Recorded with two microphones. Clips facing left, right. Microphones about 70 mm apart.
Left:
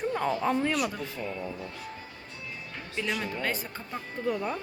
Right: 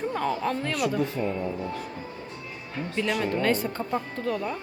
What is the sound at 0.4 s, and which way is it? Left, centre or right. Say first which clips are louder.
Speech: even; centre.